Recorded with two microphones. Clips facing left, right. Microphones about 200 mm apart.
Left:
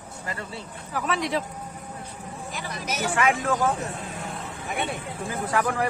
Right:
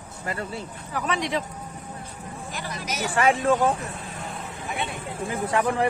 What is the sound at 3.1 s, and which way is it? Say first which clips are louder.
Speech: right 4 dB; 30° right (ahead or behind).